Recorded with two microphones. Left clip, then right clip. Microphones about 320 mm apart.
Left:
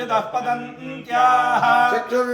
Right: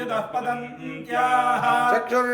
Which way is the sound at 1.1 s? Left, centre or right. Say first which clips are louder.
Left 4 dB; centre.